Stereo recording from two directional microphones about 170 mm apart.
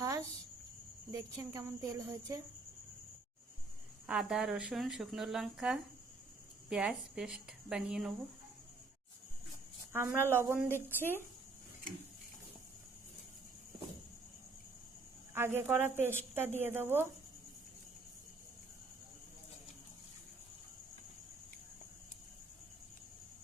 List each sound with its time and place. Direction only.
0.0 s cricket: 20° right (ahead or behind)
1.1 s speech: 20° right (ahead or behind)
4.0 s a woman's voice: 5° right (ahead or behind)
9.9 s speech: 15° right (ahead or behind)
15.4 s speech: 15° right (ahead or behind)